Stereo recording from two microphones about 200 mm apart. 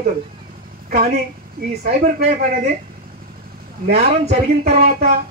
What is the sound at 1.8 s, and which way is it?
Speech, 40° right (ahead or behind).